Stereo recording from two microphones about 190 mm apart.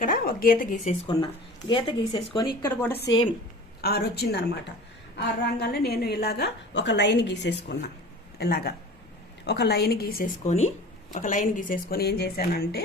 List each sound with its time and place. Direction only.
0.0 s speech: 50° left (ahead or behind)
1.0 s speech: 25° left (ahead or behind)
3.8 s a woman's voice: 55° left (ahead or behind)
10.4 s speech: 35° left (ahead or behind); by 12.8 s 55° left (ahead or behind)